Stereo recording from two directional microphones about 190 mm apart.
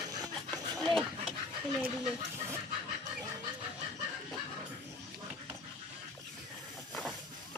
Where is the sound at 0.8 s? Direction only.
Centre (ahead or behind).